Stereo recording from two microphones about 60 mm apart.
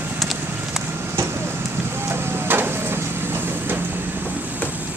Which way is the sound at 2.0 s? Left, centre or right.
Right.